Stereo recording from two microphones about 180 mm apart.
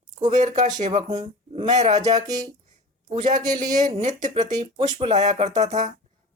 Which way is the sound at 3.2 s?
45° right (ahead or behind).